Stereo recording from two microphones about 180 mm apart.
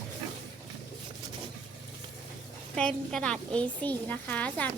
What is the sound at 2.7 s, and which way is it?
Speech, 5° left (ahead or behind).